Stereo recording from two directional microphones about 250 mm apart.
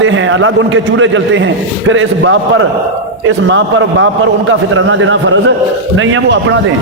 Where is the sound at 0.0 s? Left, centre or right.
Right.